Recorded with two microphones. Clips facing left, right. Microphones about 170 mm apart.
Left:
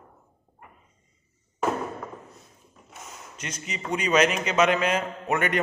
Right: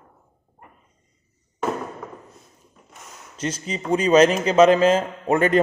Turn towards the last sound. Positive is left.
turn(degrees=-30)  # may be behind; listen again after turning